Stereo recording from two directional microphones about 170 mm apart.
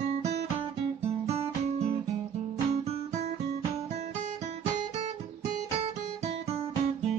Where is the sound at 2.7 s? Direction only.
40° right (ahead or behind).